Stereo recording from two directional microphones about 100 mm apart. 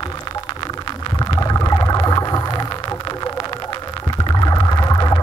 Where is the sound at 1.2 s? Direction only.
40° left (ahead or behind).